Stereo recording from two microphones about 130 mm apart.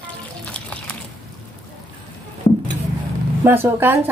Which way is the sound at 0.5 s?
10° left (ahead or behind).